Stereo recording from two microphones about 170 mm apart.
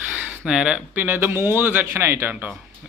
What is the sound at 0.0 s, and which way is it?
Speech, 10° right (ahead or behind).